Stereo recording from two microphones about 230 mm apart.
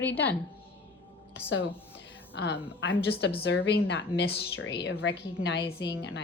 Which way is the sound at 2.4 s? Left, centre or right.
Left.